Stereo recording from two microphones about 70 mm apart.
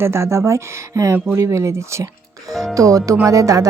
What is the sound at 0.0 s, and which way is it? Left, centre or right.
Speech, right.